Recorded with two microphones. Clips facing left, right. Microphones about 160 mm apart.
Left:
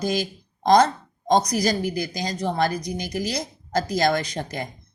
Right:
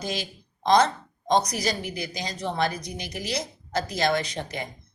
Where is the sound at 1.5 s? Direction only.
40° left (ahead or behind).